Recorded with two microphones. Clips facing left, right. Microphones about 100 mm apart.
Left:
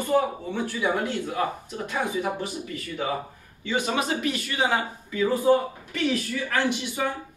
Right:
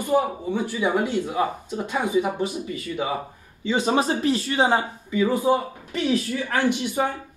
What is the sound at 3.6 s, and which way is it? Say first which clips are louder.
A man's voice: right 4 dB; 30° right (ahead or behind).